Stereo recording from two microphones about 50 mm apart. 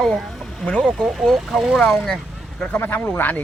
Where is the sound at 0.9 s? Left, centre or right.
Centre.